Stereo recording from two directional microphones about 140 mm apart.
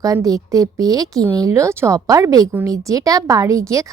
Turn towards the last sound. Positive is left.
turn(degrees=-20)  # may be behind; listen again after turning